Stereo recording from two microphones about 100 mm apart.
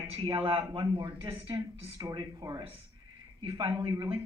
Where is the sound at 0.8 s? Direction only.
50° right (ahead or behind).